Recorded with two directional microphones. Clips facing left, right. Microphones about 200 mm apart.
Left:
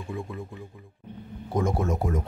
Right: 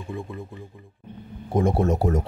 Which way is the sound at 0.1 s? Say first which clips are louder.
Right 1 dB; centre (ahead or behind).